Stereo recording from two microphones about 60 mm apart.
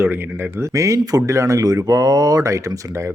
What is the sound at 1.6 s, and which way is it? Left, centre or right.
Speech, right.